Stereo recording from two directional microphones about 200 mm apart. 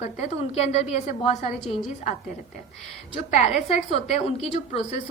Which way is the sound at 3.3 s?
30° left (ahead or behind).